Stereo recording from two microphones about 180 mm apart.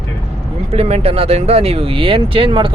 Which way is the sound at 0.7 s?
35° right (ahead or behind).